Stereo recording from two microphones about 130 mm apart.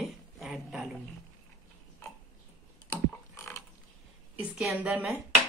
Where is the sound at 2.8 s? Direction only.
20° left (ahead or behind).